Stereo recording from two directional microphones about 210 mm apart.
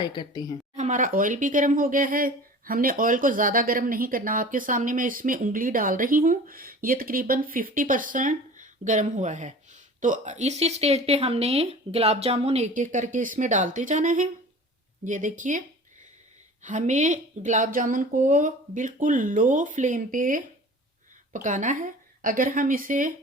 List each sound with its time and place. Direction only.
0.0 s a woman's voice: 20° left (ahead or behind)
0.8 s speech: 35° right (ahead or behind)
16.6 s speech: 35° right (ahead or behind)